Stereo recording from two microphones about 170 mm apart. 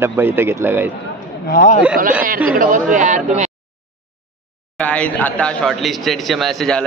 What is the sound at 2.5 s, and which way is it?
Speech, 50° right (ahead or behind).